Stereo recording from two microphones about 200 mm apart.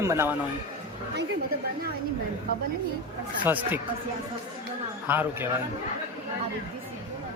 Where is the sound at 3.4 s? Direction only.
10° right (ahead or behind).